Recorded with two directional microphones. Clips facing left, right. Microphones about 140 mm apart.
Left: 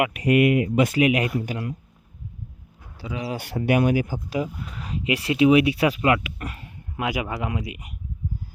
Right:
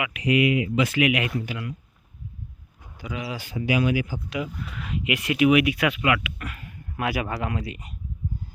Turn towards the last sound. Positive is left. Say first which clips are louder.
# even
turn(degrees=15)  # may be behind; listen again after turning